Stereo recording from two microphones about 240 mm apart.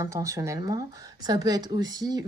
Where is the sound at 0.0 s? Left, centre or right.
Centre.